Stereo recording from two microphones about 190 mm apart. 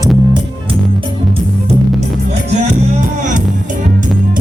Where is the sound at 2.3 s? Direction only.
35° right (ahead or behind).